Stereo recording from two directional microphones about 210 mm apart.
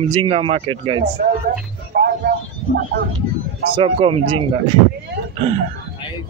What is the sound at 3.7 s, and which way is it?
Speech, 25° right (ahead or behind).